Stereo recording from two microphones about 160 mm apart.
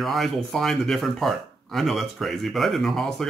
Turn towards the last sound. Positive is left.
turn(degrees=0)  # may be behind; listen again after turning